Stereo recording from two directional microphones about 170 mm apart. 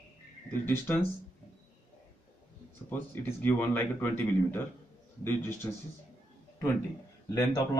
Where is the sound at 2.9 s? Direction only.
10° left (ahead or behind).